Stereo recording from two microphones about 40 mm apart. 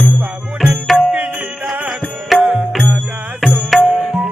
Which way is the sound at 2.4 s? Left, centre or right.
Right.